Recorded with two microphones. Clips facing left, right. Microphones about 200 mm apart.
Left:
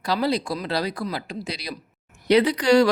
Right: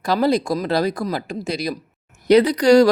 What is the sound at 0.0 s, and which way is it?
Speech, 50° right (ahead or behind).